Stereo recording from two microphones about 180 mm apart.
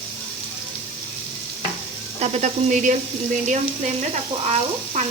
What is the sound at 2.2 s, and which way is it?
Speech, 40° right (ahead or behind).